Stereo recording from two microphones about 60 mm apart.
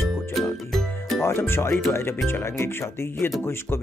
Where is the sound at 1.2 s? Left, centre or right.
Left.